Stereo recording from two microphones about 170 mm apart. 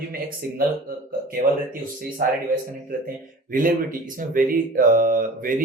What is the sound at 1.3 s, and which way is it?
Speech, 55° right (ahead or behind).